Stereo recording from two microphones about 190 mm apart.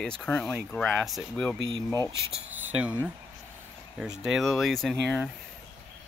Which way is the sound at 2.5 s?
10° right (ahead or behind).